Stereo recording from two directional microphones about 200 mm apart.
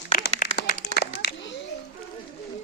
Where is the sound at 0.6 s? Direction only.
45° left (ahead or behind).